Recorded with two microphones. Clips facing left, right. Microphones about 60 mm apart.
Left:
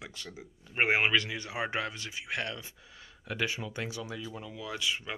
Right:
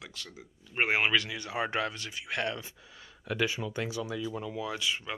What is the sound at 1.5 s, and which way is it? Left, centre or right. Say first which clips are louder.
Speech: right 3 dB; centre.